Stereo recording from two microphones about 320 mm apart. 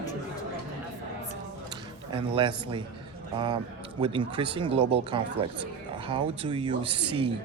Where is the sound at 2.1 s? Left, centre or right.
Centre.